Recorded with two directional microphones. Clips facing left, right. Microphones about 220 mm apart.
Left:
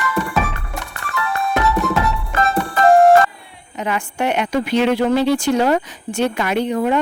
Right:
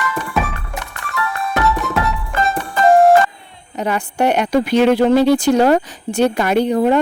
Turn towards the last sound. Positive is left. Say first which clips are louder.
# right 4 dB
turn(degrees=-35)  # may be behind; listen again after turning